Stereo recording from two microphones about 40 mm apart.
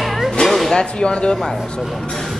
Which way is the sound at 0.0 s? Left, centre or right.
Centre.